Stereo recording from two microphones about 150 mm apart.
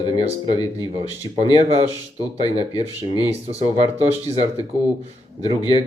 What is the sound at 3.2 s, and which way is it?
Speech, 45° right (ahead or behind).